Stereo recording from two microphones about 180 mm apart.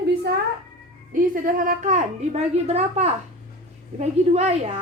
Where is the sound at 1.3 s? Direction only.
50° right (ahead or behind).